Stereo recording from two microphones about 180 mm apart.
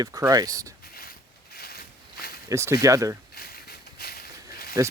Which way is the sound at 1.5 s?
60° left (ahead or behind).